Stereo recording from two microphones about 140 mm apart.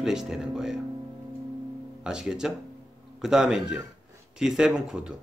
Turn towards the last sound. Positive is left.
turn(degrees=-5)  # may be behind; listen again after turning